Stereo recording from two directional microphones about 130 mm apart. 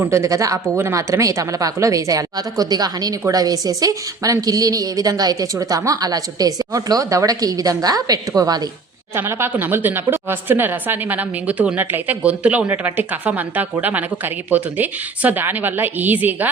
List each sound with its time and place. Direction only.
0.0 s speech: 20° right (ahead or behind)
9.1 s a woman's voice: 15° right (ahead or behind)